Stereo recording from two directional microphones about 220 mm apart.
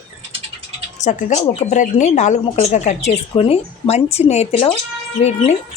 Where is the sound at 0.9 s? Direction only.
35° left (ahead or behind).